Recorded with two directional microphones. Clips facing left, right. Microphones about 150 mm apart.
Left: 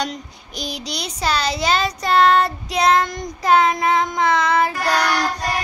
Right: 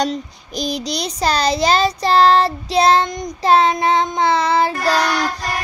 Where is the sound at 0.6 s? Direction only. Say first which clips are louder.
Right 6 dB; 40° right (ahead or behind).